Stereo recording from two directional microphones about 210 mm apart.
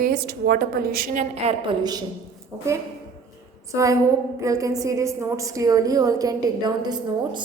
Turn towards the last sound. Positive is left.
turn(degrees=-20)  # may be behind; listen again after turning